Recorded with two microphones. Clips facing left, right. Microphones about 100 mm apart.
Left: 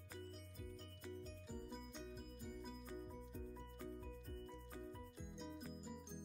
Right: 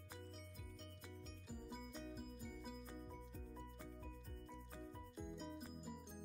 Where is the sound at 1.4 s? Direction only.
5° right (ahead or behind).